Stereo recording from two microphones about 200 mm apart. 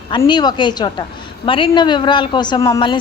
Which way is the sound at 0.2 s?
20° left (ahead or behind).